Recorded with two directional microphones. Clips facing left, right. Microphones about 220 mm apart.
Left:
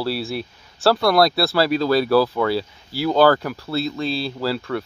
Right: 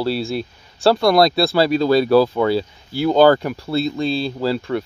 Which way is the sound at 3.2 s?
20° right (ahead or behind).